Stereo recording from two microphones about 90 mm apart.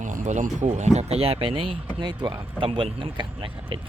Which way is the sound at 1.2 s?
90° right.